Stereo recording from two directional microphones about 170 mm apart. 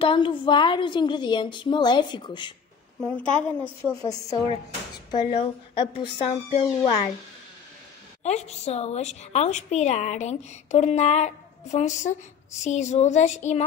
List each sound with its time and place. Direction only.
0.0 s a woman's voice: 30° left (ahead or behind)
3.0 s a woman's voice: 5° left (ahead or behind)
3.9 s a woman's voice: 20° left (ahead or behind); by 7.0 s 40° left (ahead or behind)
8.2 s a woman's voice: 40° left (ahead or behind)